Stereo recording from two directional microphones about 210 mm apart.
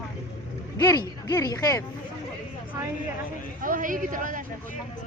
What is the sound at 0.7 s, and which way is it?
Speech, 20° left (ahead or behind).